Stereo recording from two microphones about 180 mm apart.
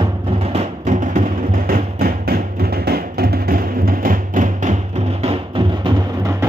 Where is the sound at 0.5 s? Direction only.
40° right (ahead or behind).